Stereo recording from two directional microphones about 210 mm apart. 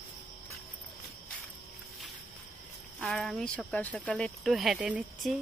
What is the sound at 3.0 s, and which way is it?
Speech, centre (ahead or behind).